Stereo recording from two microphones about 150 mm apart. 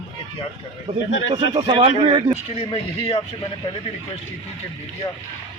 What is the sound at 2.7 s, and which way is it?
Speech, 40° left (ahead or behind).